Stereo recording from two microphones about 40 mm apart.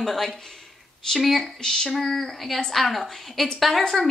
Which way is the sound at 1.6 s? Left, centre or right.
Centre.